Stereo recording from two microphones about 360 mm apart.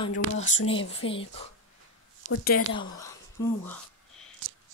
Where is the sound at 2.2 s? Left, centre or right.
Left.